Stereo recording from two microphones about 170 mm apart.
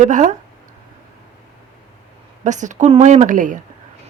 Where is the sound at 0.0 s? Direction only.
45° right (ahead or behind).